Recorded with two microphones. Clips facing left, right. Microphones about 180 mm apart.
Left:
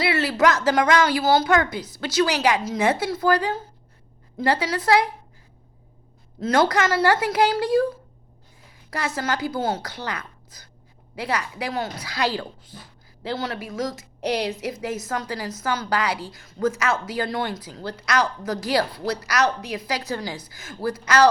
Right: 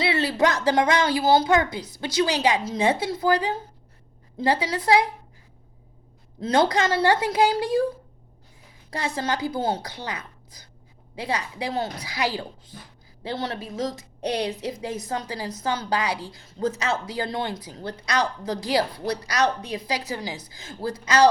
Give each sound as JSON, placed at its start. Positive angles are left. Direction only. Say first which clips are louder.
{"t": 0.0, "sound": "a sound", "louder": "left 1 dB", "side_deg": -20}
{"t": 0.4, "sound": "a woman's voice", "louder": "left 2 dB", "side_deg": -20}
{"t": 6.4, "sound": "a woman's voice", "louder": "left 1 dB", "side_deg": -20}
{"t": 8.9, "sound": "a woman's voice", "louder": "left 1 dB", "side_deg": -20}